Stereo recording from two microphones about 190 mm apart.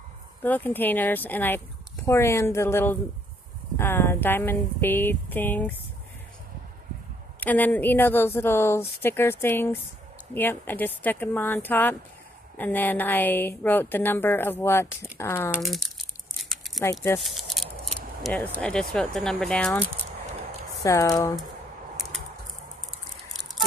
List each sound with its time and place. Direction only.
0.4 s a woman's voice: 10° left (ahead or behind)
7.3 s a woman's voice: 10° left (ahead or behind)
15.6 s crumpling: centre (ahead or behind)
16.8 s a woman's voice: 15° left (ahead or behind)
17.2 s speech: centre (ahead or behind)
20.8 s a woman's voice: 15° left (ahead or behind)